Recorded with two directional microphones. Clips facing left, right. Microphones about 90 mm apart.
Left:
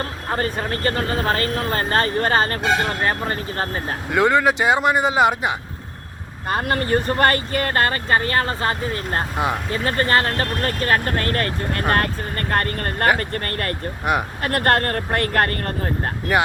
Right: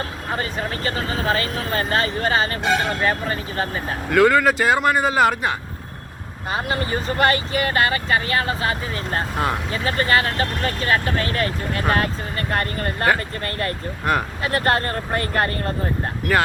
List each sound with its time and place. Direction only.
0.3 s speech: 45° left (ahead or behind)
4.1 s speech: 20° left (ahead or behind)
6.5 s speech: 55° left (ahead or behind)
14.0 s speech: 15° left (ahead or behind)
14.4 s speech: 55° left (ahead or behind)